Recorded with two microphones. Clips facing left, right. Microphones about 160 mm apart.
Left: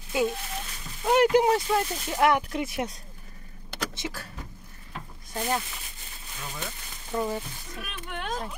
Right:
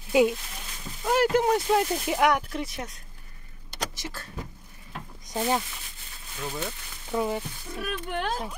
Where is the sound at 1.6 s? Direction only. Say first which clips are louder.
Right 3 dB; 10° right (ahead or behind).